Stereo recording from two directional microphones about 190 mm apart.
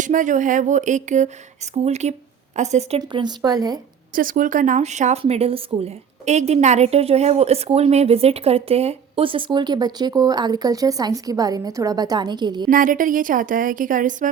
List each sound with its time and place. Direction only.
0.0 s speech: 40° right (ahead or behind)
3.0 s a woman's voice: 25° right (ahead or behind)
4.1 s speech: 45° right (ahead or behind); by 12.6 s 20° right (ahead or behind)
12.6 s a woman's voice: 45° right (ahead or behind)